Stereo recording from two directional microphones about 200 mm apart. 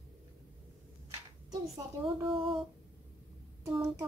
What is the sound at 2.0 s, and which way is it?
Speech, 25° right (ahead or behind).